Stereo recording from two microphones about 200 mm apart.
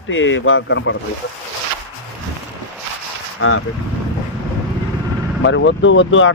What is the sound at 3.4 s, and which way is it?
Speech, 90° left.